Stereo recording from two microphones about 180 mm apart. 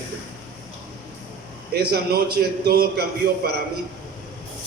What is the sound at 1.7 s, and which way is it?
A man's voice, 60° right (ahead or behind).